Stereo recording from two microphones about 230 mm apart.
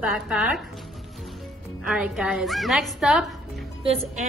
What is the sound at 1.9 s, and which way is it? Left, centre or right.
A woman's voice, centre.